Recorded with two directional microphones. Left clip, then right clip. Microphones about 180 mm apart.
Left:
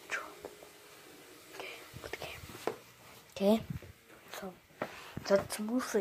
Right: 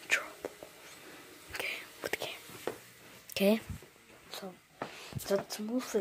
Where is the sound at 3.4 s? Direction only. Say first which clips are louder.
Right 2 dB; 35° right (ahead or behind).